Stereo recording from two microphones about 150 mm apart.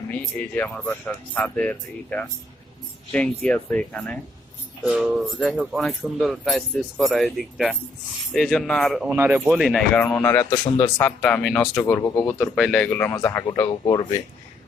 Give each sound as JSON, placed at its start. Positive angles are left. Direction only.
{"t": 0.1, "sound": "speech", "side_deg": 10}
{"t": 4.9, "sound": "speech", "side_deg": -5}
{"t": 9.1, "sound": "speech", "side_deg": -15}
{"t": 10.2, "sound": "speech", "side_deg": 15}
{"t": 11.0, "sound": "speech", "side_deg": 10}
{"t": 12.5, "sound": "speech", "side_deg": 0}